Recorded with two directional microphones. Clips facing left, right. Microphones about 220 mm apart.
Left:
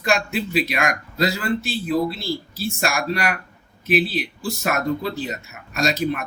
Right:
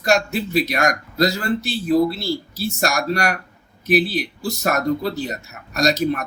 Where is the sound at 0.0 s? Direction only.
40° right (ahead or behind).